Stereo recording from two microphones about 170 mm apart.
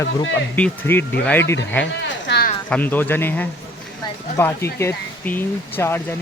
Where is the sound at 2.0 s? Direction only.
80° left.